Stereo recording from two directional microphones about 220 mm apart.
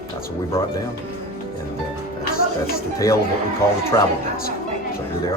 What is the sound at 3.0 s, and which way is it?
Speech, 15° left (ahead or behind).